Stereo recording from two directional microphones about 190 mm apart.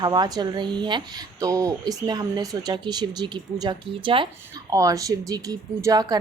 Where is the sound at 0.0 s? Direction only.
20° right (ahead or behind).